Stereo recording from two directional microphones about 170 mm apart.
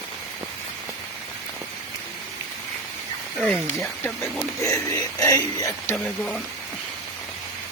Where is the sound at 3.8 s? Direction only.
10° left (ahead or behind).